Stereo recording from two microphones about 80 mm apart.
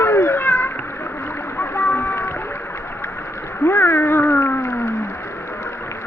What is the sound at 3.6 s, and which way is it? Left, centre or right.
Cat, left.